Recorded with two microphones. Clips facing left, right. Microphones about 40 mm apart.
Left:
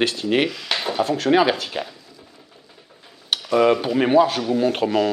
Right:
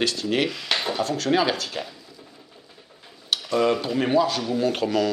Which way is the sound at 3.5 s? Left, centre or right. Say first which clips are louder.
Left 5 dB; centre.